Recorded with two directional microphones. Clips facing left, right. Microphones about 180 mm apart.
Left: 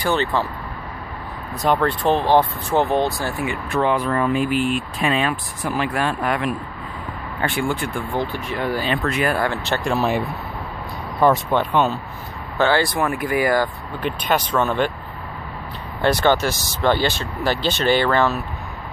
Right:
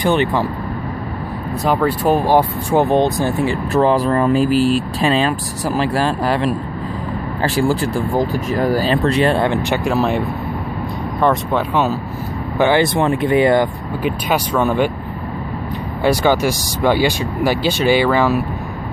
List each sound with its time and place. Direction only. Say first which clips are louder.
0.0 s speech: right 5 dB; 15° right (ahead or behind)
1.7 s speech: right 3 dB; 5° right (ahead or behind)
3.4 s speech: right 4 dB; 35° right (ahead or behind)
9.8 s speech: right 1 dB; centre (ahead or behind)
12.5 s speech: right 4 dB; 15° right (ahead or behind)
14.0 s speech: right 2 dB; 10° right (ahead or behind)
16.0 s speech: right 3 dB; 10° right (ahead or behind)